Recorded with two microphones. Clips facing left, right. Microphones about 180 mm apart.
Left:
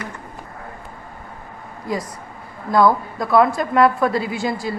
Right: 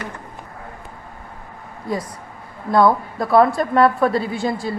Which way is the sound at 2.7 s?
30° right (ahead or behind).